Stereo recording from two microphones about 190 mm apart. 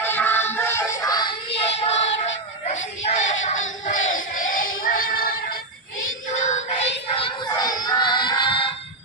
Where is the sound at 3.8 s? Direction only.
40° left (ahead or behind).